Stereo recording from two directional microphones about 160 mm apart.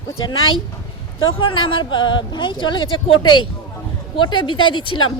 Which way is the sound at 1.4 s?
30° left (ahead or behind).